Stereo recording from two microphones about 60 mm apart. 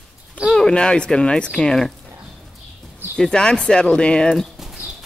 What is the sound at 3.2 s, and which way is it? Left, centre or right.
Speech, centre.